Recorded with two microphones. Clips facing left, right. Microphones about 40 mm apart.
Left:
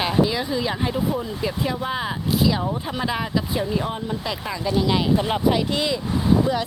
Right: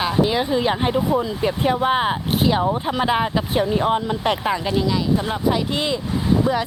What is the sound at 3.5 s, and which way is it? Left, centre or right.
Speech, right.